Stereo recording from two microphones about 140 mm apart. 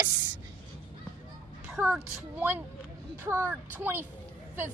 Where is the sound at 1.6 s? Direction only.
5° right (ahead or behind).